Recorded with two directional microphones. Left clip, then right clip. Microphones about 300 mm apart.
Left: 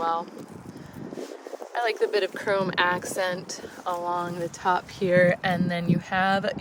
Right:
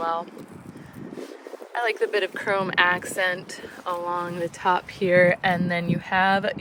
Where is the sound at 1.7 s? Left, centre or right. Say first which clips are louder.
Right 1 dB; centre.